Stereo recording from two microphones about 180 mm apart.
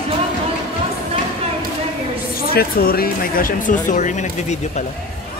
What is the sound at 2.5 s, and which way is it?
Speech, 55° left (ahead or behind).